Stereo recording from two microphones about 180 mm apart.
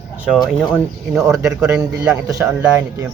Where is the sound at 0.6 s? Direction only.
Centre (ahead or behind).